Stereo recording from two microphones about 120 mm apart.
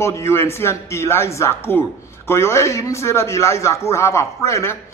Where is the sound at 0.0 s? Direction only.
25° left (ahead or behind).